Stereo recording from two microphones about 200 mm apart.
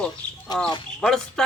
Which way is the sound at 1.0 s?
5° left (ahead or behind).